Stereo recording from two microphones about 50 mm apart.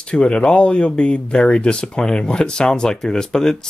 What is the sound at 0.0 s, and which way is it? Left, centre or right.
Speech, left.